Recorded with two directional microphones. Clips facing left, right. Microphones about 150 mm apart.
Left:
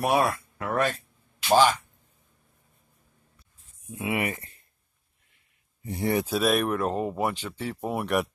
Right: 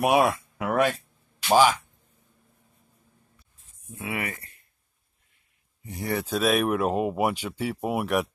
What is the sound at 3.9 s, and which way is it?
Speech, 20° left (ahead or behind).